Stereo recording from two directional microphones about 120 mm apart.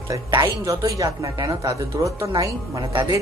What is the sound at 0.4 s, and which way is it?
Speech, 30° right (ahead or behind).